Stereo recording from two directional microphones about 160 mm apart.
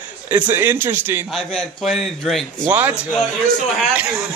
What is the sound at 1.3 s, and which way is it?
Speech, 5° left (ahead or behind).